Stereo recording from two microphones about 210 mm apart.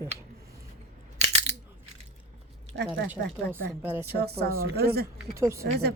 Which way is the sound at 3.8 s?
10° right (ahead or behind).